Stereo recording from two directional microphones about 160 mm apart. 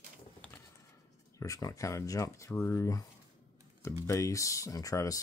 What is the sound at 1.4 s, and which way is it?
Speech, 20° left (ahead or behind).